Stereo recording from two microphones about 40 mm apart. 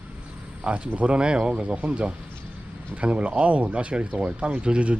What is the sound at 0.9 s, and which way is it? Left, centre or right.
Speech, right.